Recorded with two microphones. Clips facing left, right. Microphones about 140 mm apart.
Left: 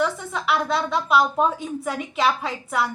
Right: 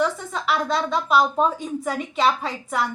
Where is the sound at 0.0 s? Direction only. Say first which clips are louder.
Right 1 dB; 5° left (ahead or behind).